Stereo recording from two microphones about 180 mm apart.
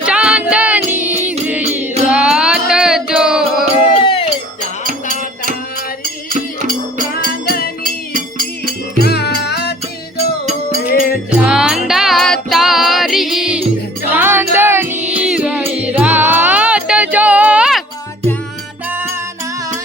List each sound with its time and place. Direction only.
0.0 s music: 5° right (ahead or behind)
4.0 s music: 30° left (ahead or behind)
4.8 s music: 50° right (ahead or behind)
6.3 s music: 50° right (ahead or behind)
7.1 s music: 55° left (ahead or behind)
7.9 s music: 50° right (ahead or behind)
9.0 s music: 65° left (ahead or behind)
10.8 s music: 55° left (ahead or behind)
11.4 s music: 5° right (ahead or behind)
18.9 s music: 10° right (ahead or behind)